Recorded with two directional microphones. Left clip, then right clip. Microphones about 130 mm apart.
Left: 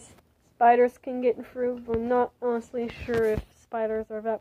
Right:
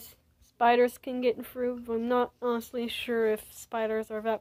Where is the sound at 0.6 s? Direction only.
35° right (ahead or behind).